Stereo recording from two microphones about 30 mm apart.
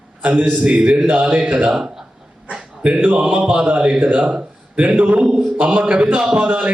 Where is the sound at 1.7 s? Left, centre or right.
Centre.